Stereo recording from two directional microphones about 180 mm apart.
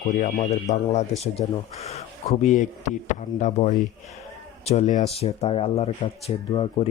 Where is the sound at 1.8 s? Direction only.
35° left (ahead or behind).